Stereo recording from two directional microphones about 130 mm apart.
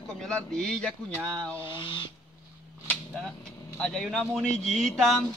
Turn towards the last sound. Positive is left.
turn(degrees=0)  # may be behind; listen again after turning